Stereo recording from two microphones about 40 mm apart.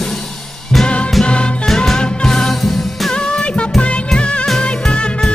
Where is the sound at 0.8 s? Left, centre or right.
Left.